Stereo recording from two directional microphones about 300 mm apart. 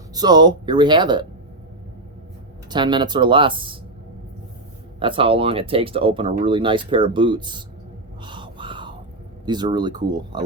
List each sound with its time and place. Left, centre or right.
0.1 s speech: centre
2.6 s speech: centre
4.9 s speech: centre
8.2 s a sound: centre
9.5 s speech: centre